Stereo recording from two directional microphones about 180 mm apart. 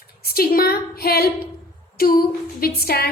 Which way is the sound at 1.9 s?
55° left (ahead or behind).